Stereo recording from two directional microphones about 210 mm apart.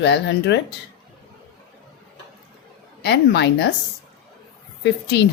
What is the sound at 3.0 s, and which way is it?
Speech, 55° left (ahead or behind).